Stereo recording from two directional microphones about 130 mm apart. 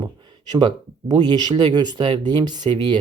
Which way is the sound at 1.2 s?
35° right (ahead or behind).